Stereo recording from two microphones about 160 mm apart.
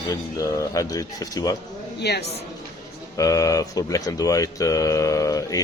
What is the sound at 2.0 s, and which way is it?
Speech, 90° left.